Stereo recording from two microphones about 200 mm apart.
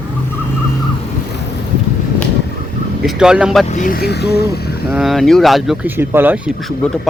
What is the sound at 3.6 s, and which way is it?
Speech, 40° left (ahead or behind).